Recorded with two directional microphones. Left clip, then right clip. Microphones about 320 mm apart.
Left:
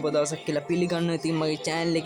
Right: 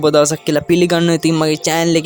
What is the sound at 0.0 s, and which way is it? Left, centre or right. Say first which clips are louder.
Speech: right 13 dB; right.